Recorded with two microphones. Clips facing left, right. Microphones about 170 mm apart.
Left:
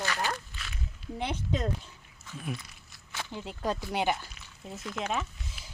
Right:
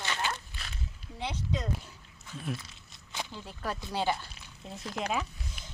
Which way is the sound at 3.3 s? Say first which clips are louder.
Left 7 dB; 20° left (ahead or behind).